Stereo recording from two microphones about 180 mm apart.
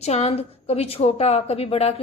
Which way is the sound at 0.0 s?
35° left (ahead or behind).